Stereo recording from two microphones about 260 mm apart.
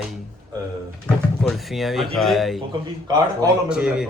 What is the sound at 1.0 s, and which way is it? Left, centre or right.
Speech, centre.